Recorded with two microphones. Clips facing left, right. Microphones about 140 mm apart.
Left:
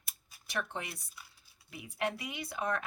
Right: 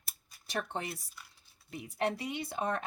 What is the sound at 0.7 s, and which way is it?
Speech, 35° right (ahead or behind).